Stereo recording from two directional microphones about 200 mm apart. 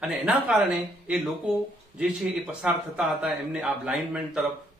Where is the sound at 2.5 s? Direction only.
5° right (ahead or behind).